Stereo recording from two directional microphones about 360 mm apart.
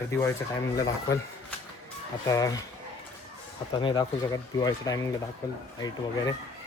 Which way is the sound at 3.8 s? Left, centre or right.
Centre.